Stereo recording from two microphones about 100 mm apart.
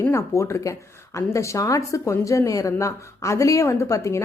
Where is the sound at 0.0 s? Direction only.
25° left (ahead or behind).